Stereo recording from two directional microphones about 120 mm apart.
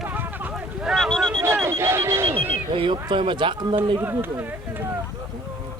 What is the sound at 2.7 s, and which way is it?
Speech, 45° right (ahead or behind).